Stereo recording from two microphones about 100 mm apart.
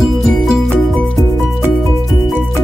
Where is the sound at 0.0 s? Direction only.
Centre (ahead or behind).